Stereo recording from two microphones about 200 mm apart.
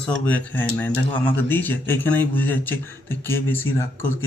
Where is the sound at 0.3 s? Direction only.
10° left (ahead or behind).